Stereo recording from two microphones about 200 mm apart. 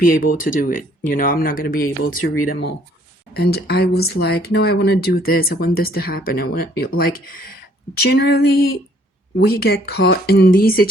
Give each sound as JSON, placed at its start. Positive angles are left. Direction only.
{"t": 0.0, "sound": "speech", "side_deg": 45}
{"t": 2.0, "sound": "speech", "side_deg": 90}
{"t": 2.5, "sound": "speech", "side_deg": 55}